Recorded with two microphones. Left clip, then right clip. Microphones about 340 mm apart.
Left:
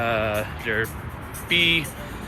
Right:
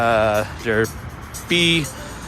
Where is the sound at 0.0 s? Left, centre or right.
Centre.